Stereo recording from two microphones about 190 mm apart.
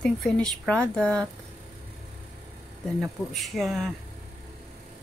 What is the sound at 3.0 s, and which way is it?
Speech, centre (ahead or behind).